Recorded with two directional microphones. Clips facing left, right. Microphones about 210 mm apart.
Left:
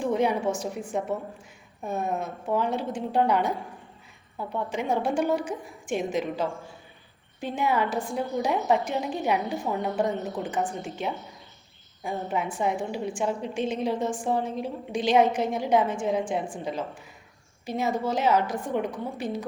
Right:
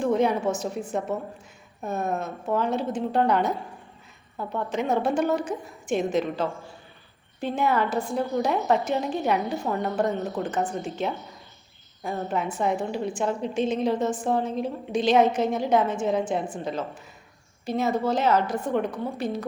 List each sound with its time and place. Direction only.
0.0 s a woman's voice: 10° left (ahead or behind)